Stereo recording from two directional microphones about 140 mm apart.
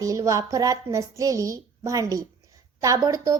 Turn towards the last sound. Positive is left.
turn(degrees=-25)  # may be behind; listen again after turning